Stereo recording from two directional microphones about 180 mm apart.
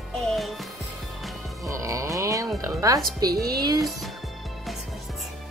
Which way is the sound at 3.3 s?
60° right (ahead or behind).